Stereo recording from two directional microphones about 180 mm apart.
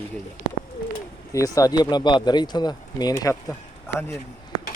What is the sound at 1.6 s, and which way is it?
Speech, 20° left (ahead or behind).